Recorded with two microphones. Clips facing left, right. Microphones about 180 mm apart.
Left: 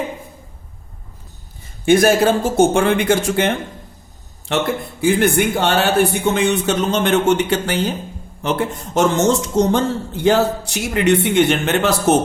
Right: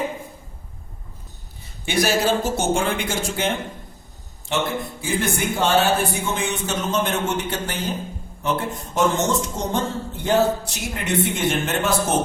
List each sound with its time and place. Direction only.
1.8 s speech: 50° left (ahead or behind)
4.9 s a man's voice: 65° left (ahead or behind)